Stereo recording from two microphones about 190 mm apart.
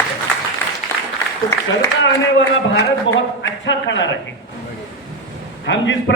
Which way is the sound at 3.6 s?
70° left (ahead or behind).